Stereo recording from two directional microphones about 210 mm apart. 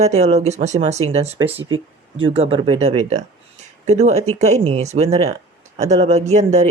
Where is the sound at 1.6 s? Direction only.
75° right (ahead or behind).